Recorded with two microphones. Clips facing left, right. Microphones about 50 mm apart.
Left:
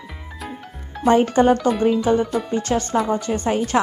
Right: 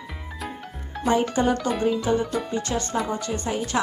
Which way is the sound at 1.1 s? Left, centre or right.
Left.